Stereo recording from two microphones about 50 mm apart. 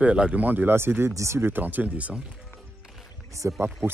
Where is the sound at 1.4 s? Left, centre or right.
Right.